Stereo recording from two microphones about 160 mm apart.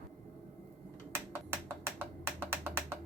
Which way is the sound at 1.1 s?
15° right (ahead or behind).